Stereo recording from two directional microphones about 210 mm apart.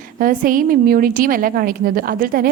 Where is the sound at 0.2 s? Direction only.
40° right (ahead or behind).